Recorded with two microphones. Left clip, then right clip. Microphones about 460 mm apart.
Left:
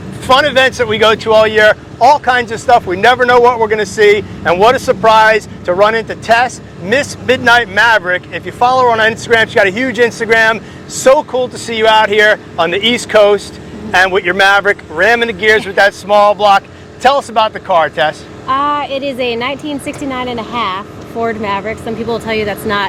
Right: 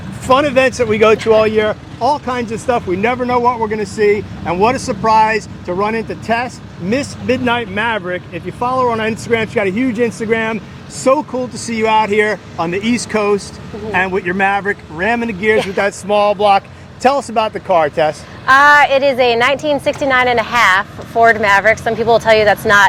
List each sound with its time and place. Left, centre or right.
0.3 s speech: left
6.0 s speech: left
11.0 s speech: left
15.7 s speech: left
18.4 s speech: right